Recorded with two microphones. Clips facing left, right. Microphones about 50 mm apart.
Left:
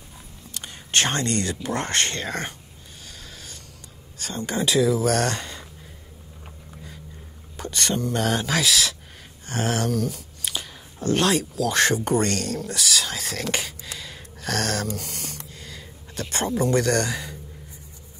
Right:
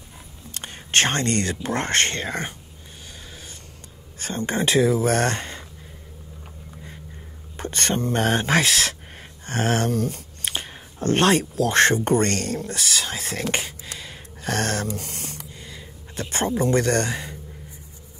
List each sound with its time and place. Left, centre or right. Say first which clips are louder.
0.6 s speech: right 2 dB; right
4.2 s speech: right 2 dB; right
7.5 s speech: right 1 dB; right
13.9 s a sound: even; right